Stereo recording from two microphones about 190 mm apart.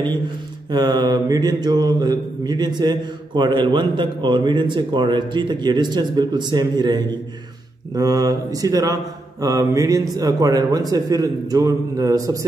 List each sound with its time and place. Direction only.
0.7 s mantra: 20° right (ahead or behind)